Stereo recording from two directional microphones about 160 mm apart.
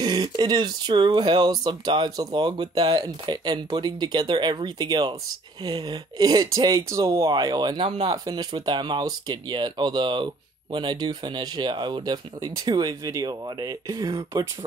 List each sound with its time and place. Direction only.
0.0 s speech: 30° right (ahead or behind)